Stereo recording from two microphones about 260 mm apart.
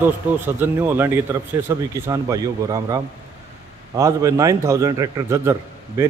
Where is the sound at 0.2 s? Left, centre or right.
Centre.